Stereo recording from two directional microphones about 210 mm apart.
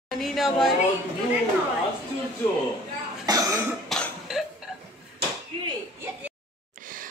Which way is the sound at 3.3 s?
15° right (ahead or behind).